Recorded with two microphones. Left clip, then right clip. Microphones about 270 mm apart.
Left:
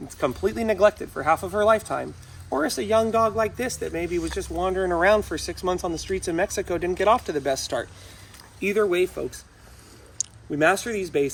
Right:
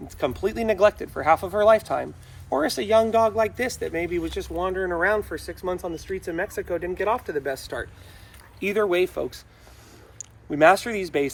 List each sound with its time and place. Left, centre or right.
0.2 s speech: centre; by 7.9 s left
8.6 s speech: centre
10.5 s speech: centre